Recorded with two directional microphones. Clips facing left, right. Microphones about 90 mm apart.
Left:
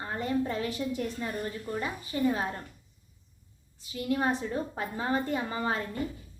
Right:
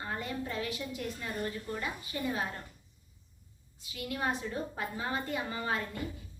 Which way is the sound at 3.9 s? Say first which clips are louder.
Left 6 dB; 35° left (ahead or behind).